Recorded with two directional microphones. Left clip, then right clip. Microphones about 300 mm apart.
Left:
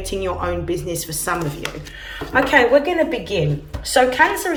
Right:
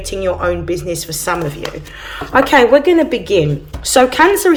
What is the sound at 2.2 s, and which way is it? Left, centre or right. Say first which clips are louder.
Speech: right 5 dB; centre.